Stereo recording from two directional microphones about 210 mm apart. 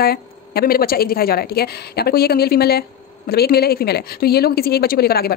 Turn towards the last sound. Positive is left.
turn(degrees=45)  # may be behind; listen again after turning